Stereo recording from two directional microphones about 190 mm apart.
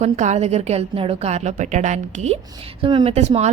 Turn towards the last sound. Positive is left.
turn(degrees=-35)  # may be behind; listen again after turning